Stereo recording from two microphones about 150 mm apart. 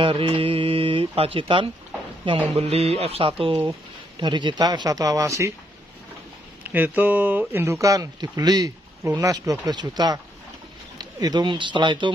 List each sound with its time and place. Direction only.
0.0 s speech: 35° right (ahead or behind)
6.6 s speech: 10° right (ahead or behind); by 12.1 s 30° right (ahead or behind)